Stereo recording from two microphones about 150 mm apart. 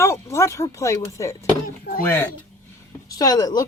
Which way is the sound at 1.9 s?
90° left.